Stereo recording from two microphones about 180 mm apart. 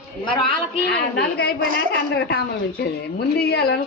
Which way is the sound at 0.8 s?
65° left (ahead or behind).